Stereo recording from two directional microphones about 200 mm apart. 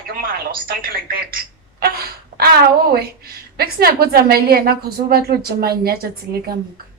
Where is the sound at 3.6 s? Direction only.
50° right (ahead or behind).